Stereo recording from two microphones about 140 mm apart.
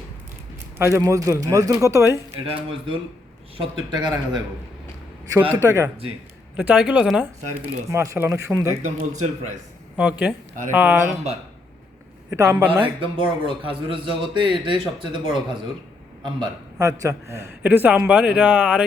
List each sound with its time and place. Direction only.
0.8 s a man's voice: 20° right (ahead or behind)
3.9 s a man's voice: 30° right (ahead or behind)
5.3 s a man's voice: 15° right (ahead or behind)
6.6 s a man's voice: 10° right (ahead or behind)
7.9 s a man's voice: 20° right (ahead or behind)
8.8 s speech: 60° right (ahead or behind)
10.0 s a man's voice: 10° right (ahead or behind)
12.3 s a man's voice: 20° right (ahead or behind)
12.8 s a man's voice: 35° right (ahead or behind)
16.7 s a man's voice: 20° right (ahead or behind)